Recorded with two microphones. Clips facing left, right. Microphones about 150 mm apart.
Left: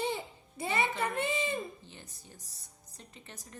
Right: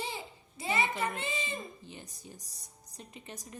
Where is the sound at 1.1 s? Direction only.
60° left (ahead or behind).